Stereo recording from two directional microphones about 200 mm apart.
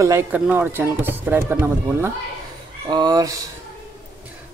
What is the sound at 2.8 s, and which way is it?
Speech, 20° right (ahead or behind).